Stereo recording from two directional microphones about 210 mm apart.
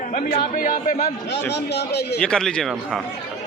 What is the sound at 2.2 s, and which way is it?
Speech, 5° left (ahead or behind).